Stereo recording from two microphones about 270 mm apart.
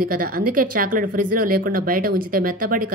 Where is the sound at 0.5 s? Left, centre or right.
Right.